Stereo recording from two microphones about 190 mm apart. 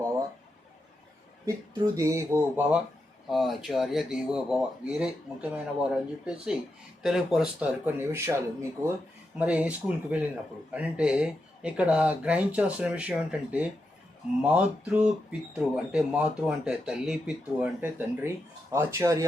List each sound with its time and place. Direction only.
2.0 s speech: 15° right (ahead or behind)
9.4 s speech: 5° right (ahead or behind)